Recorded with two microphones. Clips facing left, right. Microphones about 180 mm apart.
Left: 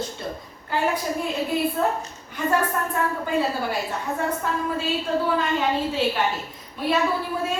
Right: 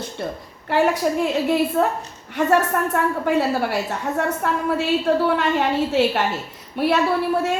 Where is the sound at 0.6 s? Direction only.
75° right (ahead or behind).